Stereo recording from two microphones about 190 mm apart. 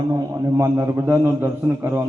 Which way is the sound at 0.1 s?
15° right (ahead or behind).